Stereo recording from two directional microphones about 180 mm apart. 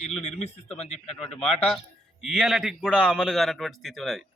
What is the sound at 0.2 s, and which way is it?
Speech, 35° left (ahead or behind).